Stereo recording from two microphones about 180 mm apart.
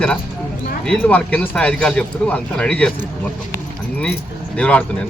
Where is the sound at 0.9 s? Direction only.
10° left (ahead or behind).